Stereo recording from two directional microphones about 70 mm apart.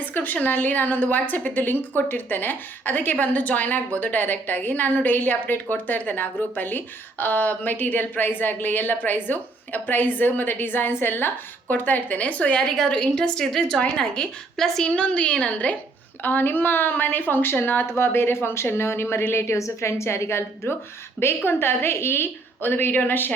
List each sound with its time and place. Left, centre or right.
0.0 s speech: left
12.6 s a woman's voice: centre; by 23.3 s left